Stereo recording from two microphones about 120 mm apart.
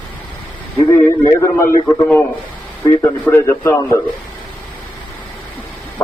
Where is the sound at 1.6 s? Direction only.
15° left (ahead or behind).